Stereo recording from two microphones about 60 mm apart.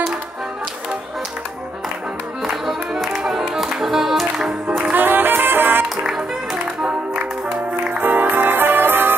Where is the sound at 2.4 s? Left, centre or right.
Centre.